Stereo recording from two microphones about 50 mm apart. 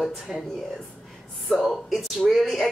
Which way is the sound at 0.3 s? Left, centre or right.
Centre.